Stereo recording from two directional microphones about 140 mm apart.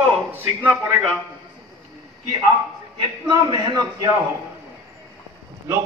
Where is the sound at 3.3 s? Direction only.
30° right (ahead or behind).